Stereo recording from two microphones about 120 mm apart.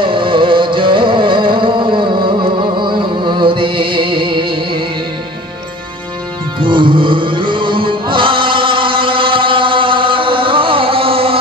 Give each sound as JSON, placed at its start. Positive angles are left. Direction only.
{"t": 0.0, "sound": "music", "side_deg": -45}
{"t": 6.6, "sound": "music", "side_deg": -45}